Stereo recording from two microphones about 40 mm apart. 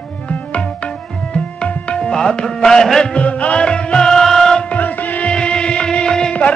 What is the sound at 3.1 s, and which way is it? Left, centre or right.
Music, left.